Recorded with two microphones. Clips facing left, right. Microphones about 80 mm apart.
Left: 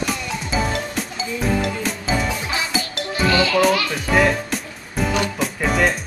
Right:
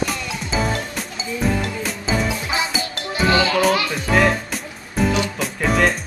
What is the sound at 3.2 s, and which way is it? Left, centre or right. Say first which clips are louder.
Music: right 1 dB; right.